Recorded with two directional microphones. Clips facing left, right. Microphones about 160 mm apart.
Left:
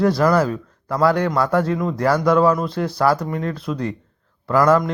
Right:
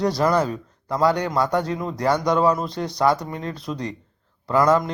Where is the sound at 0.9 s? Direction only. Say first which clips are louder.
Left 2 dB; 30° right (ahead or behind).